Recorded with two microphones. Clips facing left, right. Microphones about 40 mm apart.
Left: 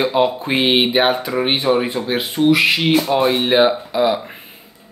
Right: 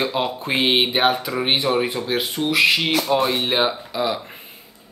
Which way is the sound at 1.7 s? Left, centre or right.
Centre.